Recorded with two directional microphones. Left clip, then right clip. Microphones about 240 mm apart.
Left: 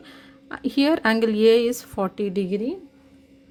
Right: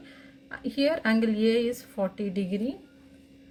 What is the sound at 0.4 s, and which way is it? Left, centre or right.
Speech, left.